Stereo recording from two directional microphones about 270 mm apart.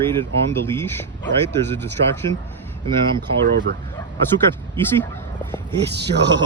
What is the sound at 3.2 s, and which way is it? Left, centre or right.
Speech, right.